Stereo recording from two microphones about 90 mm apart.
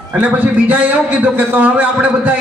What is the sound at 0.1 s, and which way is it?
A man's voice, 15° right (ahead or behind).